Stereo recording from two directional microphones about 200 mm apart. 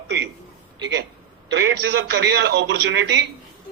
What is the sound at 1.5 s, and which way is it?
A man's voice, 60° right (ahead or behind).